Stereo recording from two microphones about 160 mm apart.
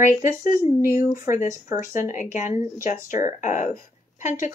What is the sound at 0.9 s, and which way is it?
A woman's voice, 65° left (ahead or behind).